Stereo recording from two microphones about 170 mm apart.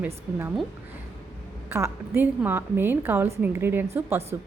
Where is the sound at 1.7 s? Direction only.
15° right (ahead or behind).